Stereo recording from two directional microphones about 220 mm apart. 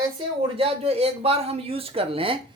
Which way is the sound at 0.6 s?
25° right (ahead or behind).